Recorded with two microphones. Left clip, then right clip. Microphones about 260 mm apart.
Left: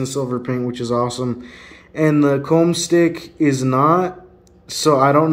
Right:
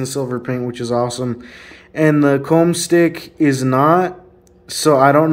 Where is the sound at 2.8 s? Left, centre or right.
Right.